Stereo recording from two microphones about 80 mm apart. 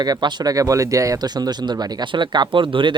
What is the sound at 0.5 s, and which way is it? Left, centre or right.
Speech, right.